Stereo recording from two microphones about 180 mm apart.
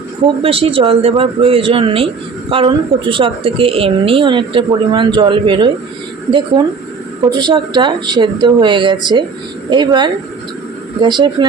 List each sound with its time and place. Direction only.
0.4 s a woman's voice: 30° right (ahead or behind)
7.3 s a woman's voice: 25° right (ahead or behind)